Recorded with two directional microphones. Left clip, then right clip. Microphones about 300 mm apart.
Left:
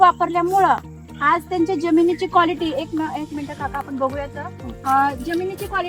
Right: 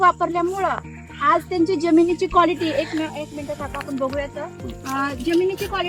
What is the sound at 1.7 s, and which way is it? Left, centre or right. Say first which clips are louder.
Speech: even; centre.